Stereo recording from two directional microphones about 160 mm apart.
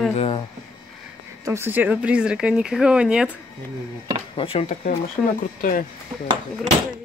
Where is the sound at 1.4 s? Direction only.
15° right (ahead or behind).